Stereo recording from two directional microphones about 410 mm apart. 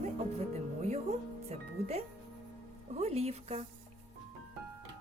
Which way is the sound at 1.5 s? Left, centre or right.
Centre.